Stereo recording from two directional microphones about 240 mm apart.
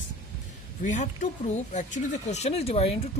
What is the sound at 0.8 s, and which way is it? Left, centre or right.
Speech, left.